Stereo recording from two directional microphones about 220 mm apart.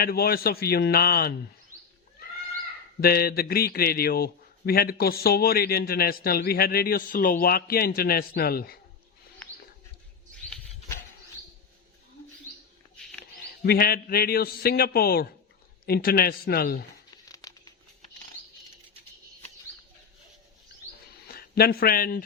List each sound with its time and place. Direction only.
0.0 s a man's voice: 45° left (ahead or behind)
3.0 s a man's voice: 45° left (ahead or behind)
13.6 s a man's voice: 45° left (ahead or behind)
17.2 s crumpling: 15° left (ahead or behind)
21.5 s a man's voice: 45° left (ahead or behind)